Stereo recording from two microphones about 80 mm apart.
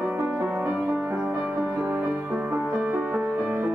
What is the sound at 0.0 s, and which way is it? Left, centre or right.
Music, right.